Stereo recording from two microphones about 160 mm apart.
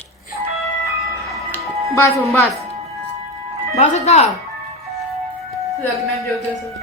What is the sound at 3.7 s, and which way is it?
Speech, 45° left (ahead or behind).